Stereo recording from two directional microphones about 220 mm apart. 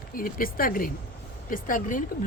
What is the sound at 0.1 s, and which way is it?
Speech, 40° left (ahead or behind).